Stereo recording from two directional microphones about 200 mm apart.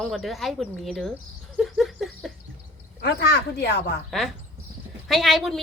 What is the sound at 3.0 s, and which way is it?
Speech, 55° left (ahead or behind).